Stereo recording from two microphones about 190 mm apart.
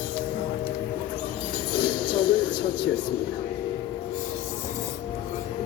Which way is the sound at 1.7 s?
25° left (ahead or behind).